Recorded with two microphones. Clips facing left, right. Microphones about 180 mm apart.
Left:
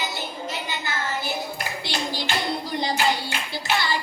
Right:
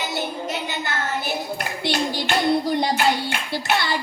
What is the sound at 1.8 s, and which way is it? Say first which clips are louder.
Clapping: right 7 dB; 60° right (ahead or behind).